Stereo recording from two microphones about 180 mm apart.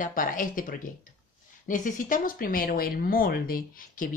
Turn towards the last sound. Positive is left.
turn(degrees=50)  # may be behind; listen again after turning